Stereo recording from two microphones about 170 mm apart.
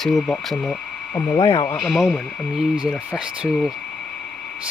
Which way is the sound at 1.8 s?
Centre (ahead or behind).